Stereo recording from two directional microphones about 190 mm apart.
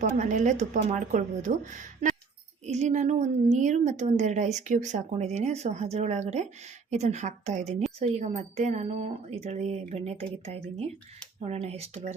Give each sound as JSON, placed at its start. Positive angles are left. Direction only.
{"t": 0.0, "sound": "a woman's voice", "side_deg": -40}